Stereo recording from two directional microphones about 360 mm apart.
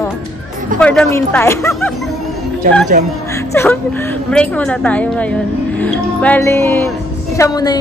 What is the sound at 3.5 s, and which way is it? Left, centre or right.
A woman's voice, centre.